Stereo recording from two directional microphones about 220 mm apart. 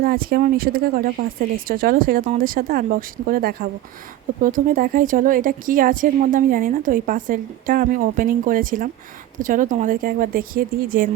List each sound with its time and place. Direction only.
0.0 s a woman's voice: 40° right (ahead or behind)